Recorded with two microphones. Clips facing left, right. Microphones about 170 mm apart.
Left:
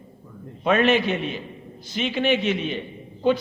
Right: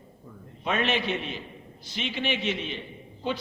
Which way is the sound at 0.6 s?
55° left (ahead or behind).